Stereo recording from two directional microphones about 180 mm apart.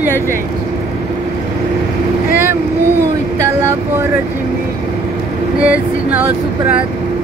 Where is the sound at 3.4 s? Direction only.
15° right (ahead or behind).